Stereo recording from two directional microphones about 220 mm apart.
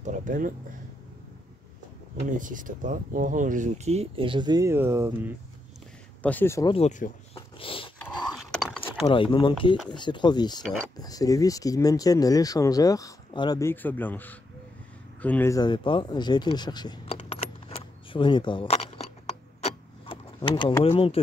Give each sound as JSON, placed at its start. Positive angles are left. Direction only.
{"t": 0.0, "sound": "a sound", "side_deg": -35}
{"t": 2.3, "sound": "speech", "side_deg": -35}
{"t": 6.2, "sound": "speech", "side_deg": 10}
{"t": 6.7, "sound": "speech", "side_deg": 30}
{"t": 7.5, "sound": "dog", "side_deg": 25}
{"t": 8.4, "sound": "a sound", "side_deg": 0}
{"t": 9.0, "sound": "speech", "side_deg": 25}
{"t": 19.6, "sound": "keys jangling", "side_deg": 25}